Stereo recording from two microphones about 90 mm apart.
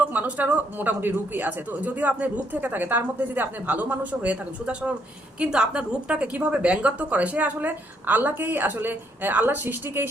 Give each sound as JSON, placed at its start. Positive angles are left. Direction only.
{"t": 0.0, "sound": "speech", "side_deg": -20}